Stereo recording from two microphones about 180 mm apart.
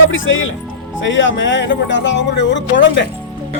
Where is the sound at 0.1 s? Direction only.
90° left.